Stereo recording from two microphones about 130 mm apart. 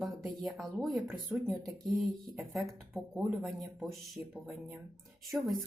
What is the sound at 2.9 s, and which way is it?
Speech, 10° right (ahead or behind).